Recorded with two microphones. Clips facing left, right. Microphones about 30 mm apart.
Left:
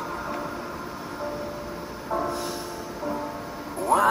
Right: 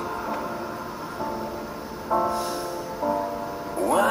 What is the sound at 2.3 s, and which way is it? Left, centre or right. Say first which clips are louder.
Music: right 3 dB; centre.